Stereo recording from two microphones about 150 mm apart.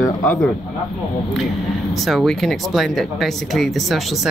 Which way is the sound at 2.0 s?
Centre (ahead or behind).